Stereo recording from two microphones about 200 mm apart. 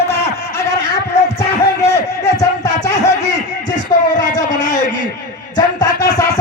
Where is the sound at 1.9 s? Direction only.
15° left (ahead or behind).